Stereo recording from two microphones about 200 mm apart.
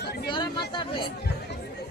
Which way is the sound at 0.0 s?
55° left (ahead or behind).